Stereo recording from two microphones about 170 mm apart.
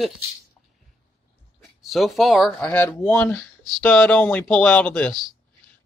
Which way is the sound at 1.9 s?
Centre (ahead or behind).